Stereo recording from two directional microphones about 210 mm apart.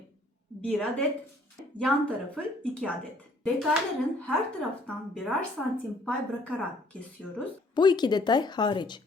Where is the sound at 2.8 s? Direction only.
5° left (ahead or behind).